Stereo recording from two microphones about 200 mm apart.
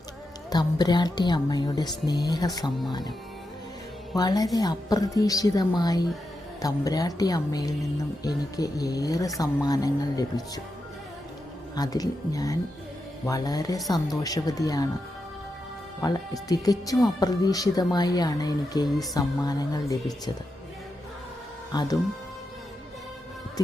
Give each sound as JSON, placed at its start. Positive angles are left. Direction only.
{"t": 0.5, "sound": "speech", "side_deg": 20}
{"t": 4.1, "sound": "a woman's voice", "side_deg": 20}
{"t": 11.7, "sound": "a woman's voice", "side_deg": 20}
{"t": 16.0, "sound": "speech", "side_deg": 20}
{"t": 21.7, "sound": "speech", "side_deg": 20}